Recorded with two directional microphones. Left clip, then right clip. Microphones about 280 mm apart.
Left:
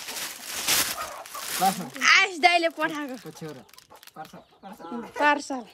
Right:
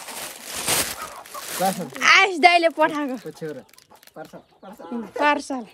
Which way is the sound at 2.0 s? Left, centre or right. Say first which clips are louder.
Right 5 dB; centre.